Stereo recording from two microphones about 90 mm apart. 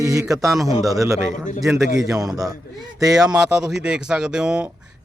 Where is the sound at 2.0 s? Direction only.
40° right (ahead or behind).